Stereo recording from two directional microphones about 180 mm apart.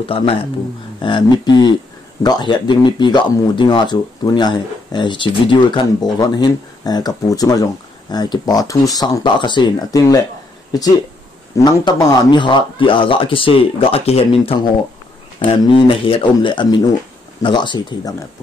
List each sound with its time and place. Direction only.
0.0 s speech: 30° left (ahead or behind)
11.5 s speech: 20° left (ahead or behind)